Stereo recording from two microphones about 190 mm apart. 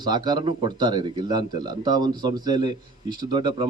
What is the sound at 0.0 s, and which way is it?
A man's voice, 20° right (ahead or behind).